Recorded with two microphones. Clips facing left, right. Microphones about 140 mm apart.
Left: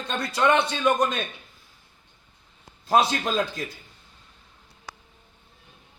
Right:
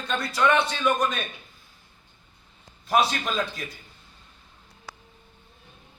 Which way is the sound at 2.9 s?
30° left (ahead or behind).